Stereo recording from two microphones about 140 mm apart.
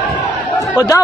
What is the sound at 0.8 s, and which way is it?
Speech, 30° left (ahead or behind).